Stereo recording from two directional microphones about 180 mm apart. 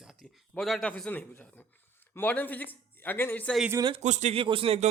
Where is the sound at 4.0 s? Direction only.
40° right (ahead or behind).